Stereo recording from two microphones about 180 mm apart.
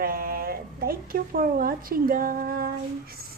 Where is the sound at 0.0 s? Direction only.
55° right (ahead or behind).